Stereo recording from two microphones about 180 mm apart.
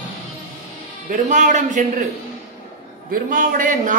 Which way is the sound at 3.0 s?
50° right (ahead or behind).